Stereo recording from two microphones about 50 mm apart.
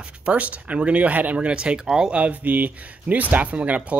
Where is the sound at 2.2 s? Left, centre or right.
Right.